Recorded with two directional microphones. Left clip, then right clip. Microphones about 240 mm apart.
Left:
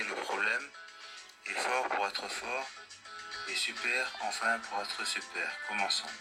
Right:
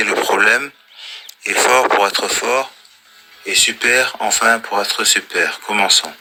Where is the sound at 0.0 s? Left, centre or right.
Right.